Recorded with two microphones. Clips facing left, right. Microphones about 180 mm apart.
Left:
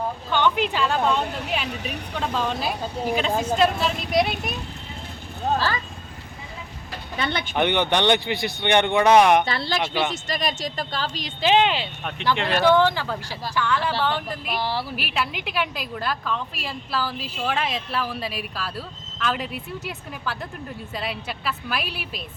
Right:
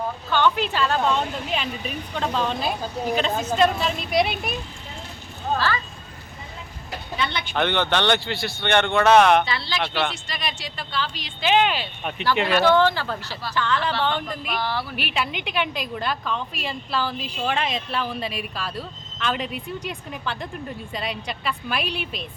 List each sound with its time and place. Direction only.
0.3 s speech: 15° left (ahead or behind)
1.6 s speech: 75° left (ahead or behind)
2.1 s speech: 5° left (ahead or behind)
7.5 s speech: 15° left (ahead or behind)
9.5 s speech: 50° left (ahead or behind); by 11.9 s 25° left (ahead or behind)
12.0 s a woman's voice: 5° right (ahead or behind)
12.6 s a woman's voice: 15° left (ahead or behind)
14.6 s speech: 30° left (ahead or behind)
14.9 s a woman's voice: centre (ahead or behind)